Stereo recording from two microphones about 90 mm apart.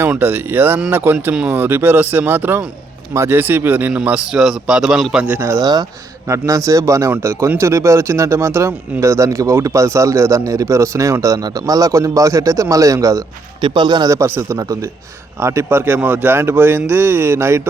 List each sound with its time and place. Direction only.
0.1 s a man's voice: 20° right (ahead or behind); by 5.2 s centre (ahead or behind)
5.4 s speech: 30° right (ahead or behind)
13.6 s speech: 60° right (ahead or behind)
14.1 s speech: 30° right (ahead or behind)